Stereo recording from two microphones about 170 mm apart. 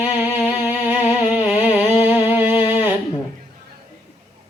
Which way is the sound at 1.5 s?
35° left (ahead or behind).